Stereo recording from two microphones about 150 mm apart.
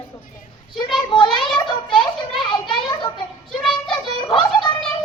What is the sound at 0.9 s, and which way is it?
Speech, 30° left (ahead or behind).